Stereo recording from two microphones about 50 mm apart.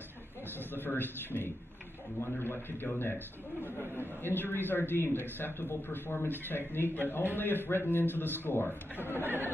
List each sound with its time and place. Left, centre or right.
0.6 s a man's voice: left
4.2 s a man's voice: left
9.2 s speech: right